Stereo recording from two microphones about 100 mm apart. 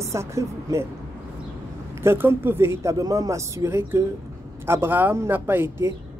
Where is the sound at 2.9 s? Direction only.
35° right (ahead or behind).